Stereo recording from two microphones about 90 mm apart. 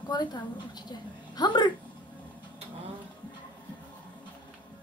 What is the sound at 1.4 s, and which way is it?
Speech, 55° left (ahead or behind).